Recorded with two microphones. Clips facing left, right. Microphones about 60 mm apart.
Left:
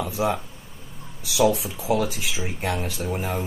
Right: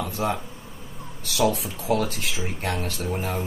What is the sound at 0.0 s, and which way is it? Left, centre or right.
Speech, centre.